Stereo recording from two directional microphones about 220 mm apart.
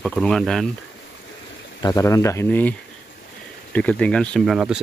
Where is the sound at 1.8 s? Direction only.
15° left (ahead or behind).